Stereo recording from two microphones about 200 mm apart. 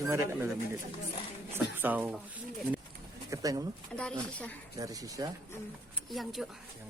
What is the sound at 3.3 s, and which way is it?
Speech, 15° right (ahead or behind).